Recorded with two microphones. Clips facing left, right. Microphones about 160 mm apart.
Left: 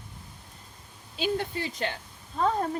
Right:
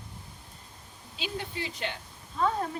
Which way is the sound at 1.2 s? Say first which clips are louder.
Left 7 dB; 45° left (ahead or behind).